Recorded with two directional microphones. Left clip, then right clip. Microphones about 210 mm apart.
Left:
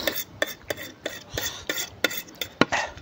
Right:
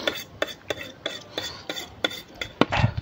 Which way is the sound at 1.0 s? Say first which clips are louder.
Even; 5° left (ahead or behind).